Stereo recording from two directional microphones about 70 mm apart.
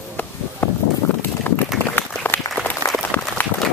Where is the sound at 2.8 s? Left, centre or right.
Left.